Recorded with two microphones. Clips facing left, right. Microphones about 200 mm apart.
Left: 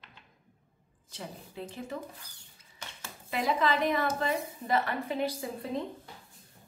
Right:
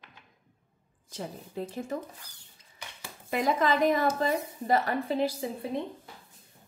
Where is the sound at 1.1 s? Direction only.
45° right (ahead or behind).